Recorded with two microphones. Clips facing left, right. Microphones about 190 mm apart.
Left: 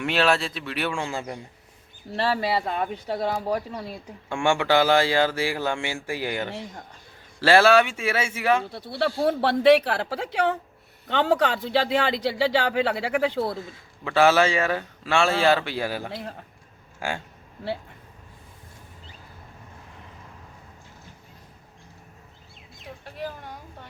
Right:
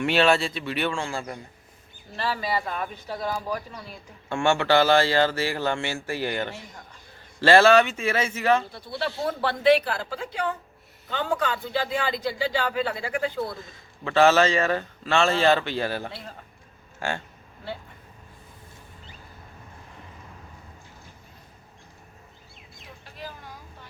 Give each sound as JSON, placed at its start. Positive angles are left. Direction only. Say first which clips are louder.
{"t": 0.0, "sound": "speech", "louder": "right 2 dB", "side_deg": 0}
{"t": 0.9, "sound": "a man's voice", "louder": "even", "side_deg": 15}
{"t": 2.1, "sound": "speech", "louder": "left 4 dB", "side_deg": 75}
{"t": 4.3, "sound": "a man's voice", "louder": "even", "side_deg": 15}
{"t": 8.7, "sound": "speech", "louder": "left 4 dB", "side_deg": 65}
{"t": 13.7, "sound": "a man's voice", "louder": "even", "side_deg": 10}